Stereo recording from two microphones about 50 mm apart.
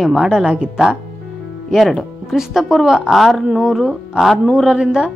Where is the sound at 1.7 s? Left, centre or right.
Centre.